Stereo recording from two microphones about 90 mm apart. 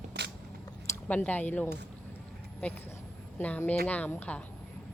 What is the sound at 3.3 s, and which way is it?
A woman's voice, 20° left (ahead or behind).